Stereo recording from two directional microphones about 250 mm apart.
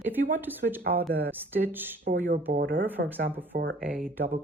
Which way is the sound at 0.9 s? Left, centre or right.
Centre.